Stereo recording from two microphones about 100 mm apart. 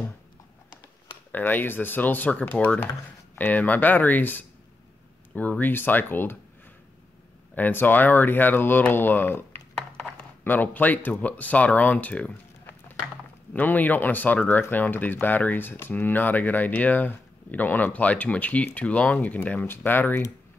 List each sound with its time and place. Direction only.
1.3 s speech: 20° left (ahead or behind)
7.5 s speech: 15° left (ahead or behind)